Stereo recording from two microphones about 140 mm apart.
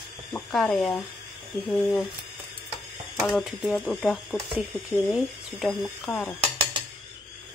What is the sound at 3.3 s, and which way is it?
Speech, centre (ahead or behind).